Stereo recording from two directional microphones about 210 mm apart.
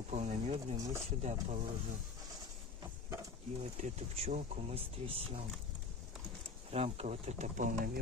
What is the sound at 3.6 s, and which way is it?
Speech, 30° right (ahead or behind).